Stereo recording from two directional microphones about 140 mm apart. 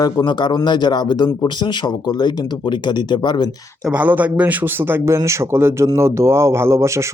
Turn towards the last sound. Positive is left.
turn(degrees=-20)  # may be behind; listen again after turning